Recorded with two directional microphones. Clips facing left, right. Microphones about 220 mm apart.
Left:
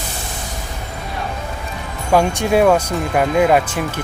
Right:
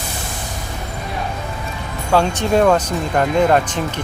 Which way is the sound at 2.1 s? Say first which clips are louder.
Left 1 dB; 10° left (ahead or behind).